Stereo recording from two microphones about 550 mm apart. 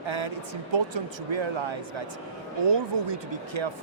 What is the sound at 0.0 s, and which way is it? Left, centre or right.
Speech, right.